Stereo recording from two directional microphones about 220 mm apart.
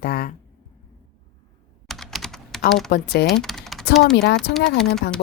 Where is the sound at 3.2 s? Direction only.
Centre (ahead or behind).